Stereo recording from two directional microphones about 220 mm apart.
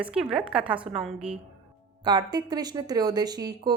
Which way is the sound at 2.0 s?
20° right (ahead or behind).